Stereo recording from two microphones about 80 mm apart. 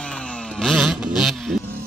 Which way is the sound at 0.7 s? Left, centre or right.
Centre.